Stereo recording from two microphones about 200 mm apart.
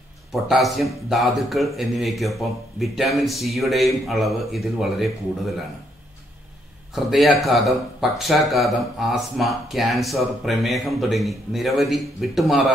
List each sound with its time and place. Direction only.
0.3 s speech: centre (ahead or behind)
7.1 s speech: centre (ahead or behind)